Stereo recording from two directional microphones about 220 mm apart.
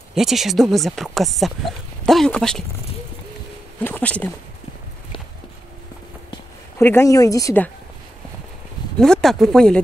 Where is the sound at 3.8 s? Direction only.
10° left (ahead or behind).